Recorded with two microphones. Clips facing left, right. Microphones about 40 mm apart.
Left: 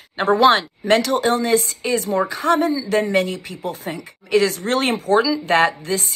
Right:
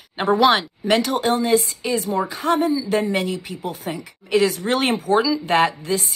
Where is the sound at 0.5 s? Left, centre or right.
Centre.